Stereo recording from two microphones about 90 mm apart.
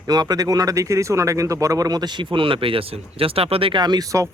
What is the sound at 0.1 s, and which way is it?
Speech, 45° right (ahead or behind).